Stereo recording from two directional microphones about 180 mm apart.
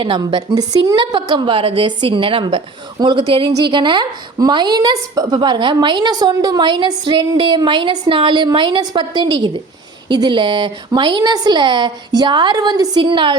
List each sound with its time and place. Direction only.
0.0 s a woman's voice: 25° right (ahead or behind)